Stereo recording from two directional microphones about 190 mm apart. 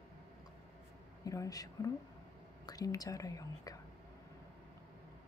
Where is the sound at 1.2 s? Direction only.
15° left (ahead or behind).